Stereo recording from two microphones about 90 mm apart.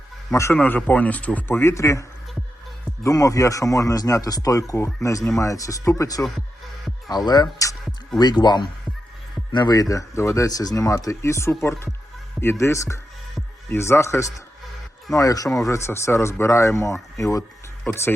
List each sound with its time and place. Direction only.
0.3 s speech: 35° left (ahead or behind)
0.5 s speech: 15° left (ahead or behind); by 17.4 s 35° left (ahead or behind)